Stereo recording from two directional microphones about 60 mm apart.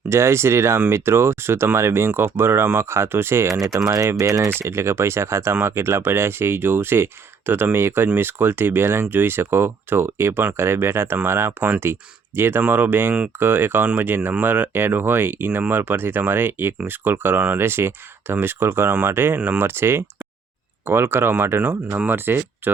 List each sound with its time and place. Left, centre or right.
0.1 s speech: right
3.6 s speech: right
3.8 s speech: right
14.2 s speech: right
14.4 s speech: right
21.6 s speech: right